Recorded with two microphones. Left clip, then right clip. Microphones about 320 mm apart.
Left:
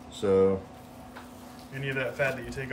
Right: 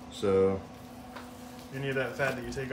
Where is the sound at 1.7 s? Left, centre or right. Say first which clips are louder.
Left 1 dB; centre.